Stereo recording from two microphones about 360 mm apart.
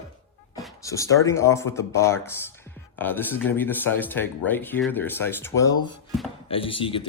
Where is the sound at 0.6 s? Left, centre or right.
Centre.